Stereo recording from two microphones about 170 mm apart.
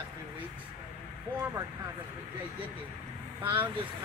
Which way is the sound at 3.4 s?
10° right (ahead or behind).